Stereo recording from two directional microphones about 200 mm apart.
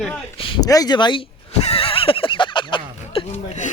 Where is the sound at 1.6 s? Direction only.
30° left (ahead or behind).